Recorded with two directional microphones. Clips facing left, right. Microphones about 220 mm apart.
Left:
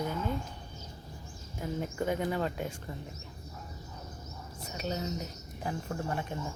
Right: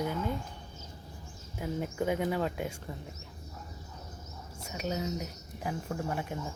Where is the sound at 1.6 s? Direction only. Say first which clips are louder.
Right 1 dB; 10° right (ahead or behind).